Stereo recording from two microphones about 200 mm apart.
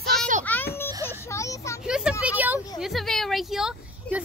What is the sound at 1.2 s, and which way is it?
Vehicle, 15° left (ahead or behind).